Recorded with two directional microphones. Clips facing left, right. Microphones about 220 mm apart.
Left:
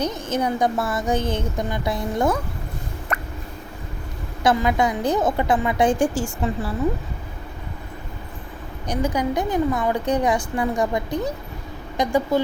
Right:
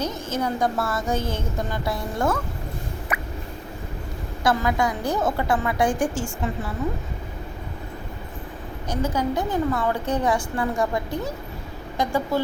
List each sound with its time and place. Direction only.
0.0 s a woman's voice: 15° left (ahead or behind)
3.1 s a sound: 10° right (ahead or behind)
4.4 s a woman's voice: 20° left (ahead or behind)
6.1 s a woman's voice: 35° left (ahead or behind)
8.9 s a woman's voice: 15° left (ahead or behind)